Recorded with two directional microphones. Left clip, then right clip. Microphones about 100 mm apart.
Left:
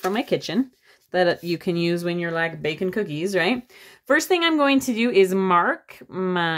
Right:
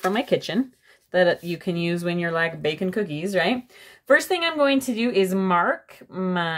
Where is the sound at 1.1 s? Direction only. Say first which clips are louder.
Right 1 dB; 25° left (ahead or behind).